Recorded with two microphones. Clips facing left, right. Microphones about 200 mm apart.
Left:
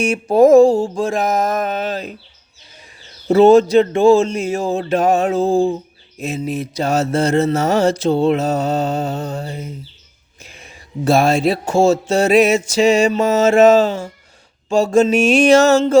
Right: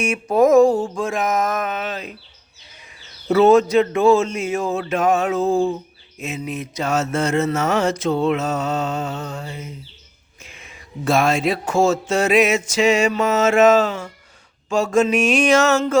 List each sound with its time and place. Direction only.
0.0 s speech: 30° left (ahead or behind)
3.2 s speech: 30° left (ahead or behind)